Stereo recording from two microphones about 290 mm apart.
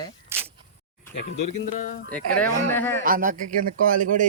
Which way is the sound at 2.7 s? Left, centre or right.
Centre.